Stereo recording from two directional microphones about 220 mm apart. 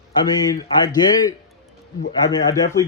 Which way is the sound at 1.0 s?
20° left (ahead or behind).